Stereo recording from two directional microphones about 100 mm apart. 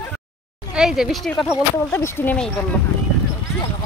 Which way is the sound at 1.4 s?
25° left (ahead or behind).